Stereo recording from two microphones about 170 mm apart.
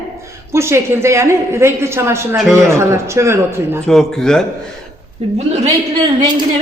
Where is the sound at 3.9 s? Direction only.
5° left (ahead or behind).